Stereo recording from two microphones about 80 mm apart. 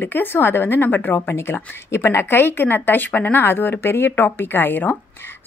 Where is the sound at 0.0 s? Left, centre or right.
Left.